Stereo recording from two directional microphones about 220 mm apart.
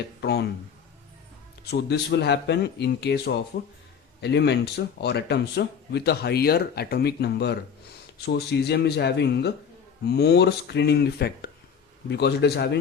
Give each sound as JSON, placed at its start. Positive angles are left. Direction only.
{"t": 0.2, "sound": "speech", "side_deg": 50}
{"t": 1.7, "sound": "speech", "side_deg": 50}